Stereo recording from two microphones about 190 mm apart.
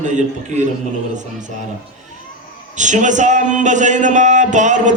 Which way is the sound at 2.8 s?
40° right (ahead or behind).